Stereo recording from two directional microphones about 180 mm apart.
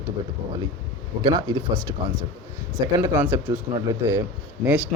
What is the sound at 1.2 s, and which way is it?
Speech, 25° right (ahead or behind).